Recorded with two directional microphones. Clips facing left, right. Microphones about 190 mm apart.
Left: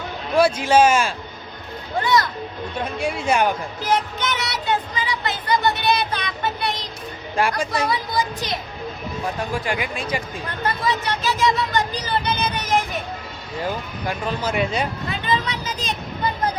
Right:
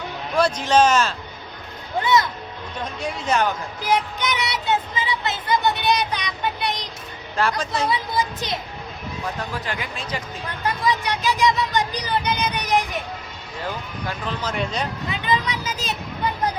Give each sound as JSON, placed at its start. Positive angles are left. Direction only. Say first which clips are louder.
{"t": 0.3, "sound": "a man's voice", "louder": "left 2 dB", "side_deg": 10}
{"t": 2.0, "sound": "speech", "louder": "even", "side_deg": -20}
{"t": 2.8, "sound": "a man's voice", "louder": "left 3 dB", "side_deg": 10}
{"t": 3.8, "sound": "speech", "louder": "even", "side_deg": -10}
{"t": 7.3, "sound": "a man's voice", "louder": "left 1 dB", "side_deg": 10}
{"t": 7.9, "sound": "speech", "louder": "even", "side_deg": -20}
{"t": 9.6, "sound": "a man's voice", "louder": "left 5 dB", "side_deg": 10}
{"t": 10.8, "sound": "speech", "louder": "right 2 dB", "side_deg": -15}
{"t": 14.1, "sound": "a man's voice", "louder": "left 4 dB", "side_deg": 10}
{"t": 15.3, "sound": "speech", "louder": "right 1 dB", "side_deg": -10}